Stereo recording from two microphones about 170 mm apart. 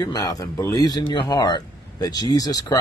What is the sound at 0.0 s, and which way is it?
Speech, 20° left (ahead or behind).